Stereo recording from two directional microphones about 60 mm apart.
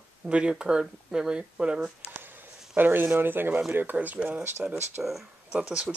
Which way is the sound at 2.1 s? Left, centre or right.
Right.